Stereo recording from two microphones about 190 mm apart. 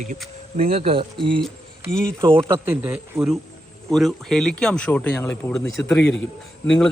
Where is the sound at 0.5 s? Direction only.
30° right (ahead or behind).